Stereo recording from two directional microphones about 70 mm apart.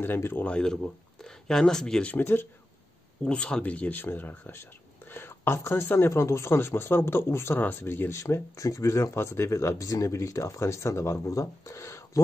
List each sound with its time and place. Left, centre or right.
0.0 s speech: left
0.5 s speech: centre
2.0 s speech: left
3.3 s speech: centre; by 8.2 s left
8.2 s speech: left